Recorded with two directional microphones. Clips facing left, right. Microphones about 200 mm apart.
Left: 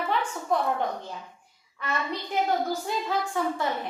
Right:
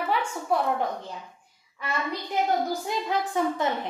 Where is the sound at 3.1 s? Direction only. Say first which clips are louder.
Right 3 dB; 20° right (ahead or behind).